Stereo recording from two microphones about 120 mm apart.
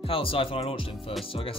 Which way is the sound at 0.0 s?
50° left (ahead or behind).